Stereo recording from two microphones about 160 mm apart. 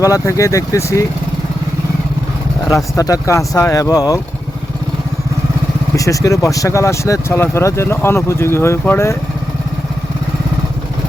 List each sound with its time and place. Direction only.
0.0 s speech: 20° left (ahead or behind)
2.6 s speech: 20° left (ahead or behind)
6.0 s speech: 20° left (ahead or behind)